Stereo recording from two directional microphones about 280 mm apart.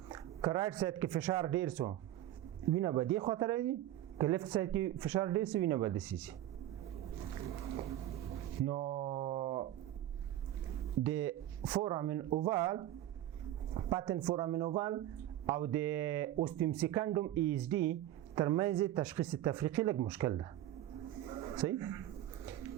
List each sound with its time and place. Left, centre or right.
0.1 s speech: centre
7.6 s a sound: right
11.0 s speech: centre
21.6 s speech: centre